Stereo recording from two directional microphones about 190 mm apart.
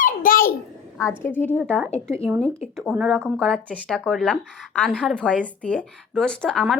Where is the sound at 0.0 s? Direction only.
45° left (ahead or behind).